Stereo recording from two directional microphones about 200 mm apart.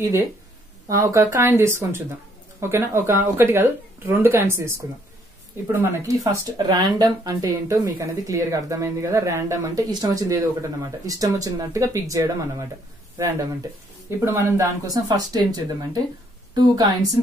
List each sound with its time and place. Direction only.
0.8 s speech: 15° right (ahead or behind)